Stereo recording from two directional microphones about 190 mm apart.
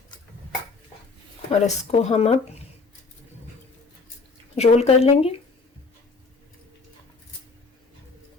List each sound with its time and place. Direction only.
1.5 s speech: 35° left (ahead or behind)
4.5 s speech: 35° left (ahead or behind)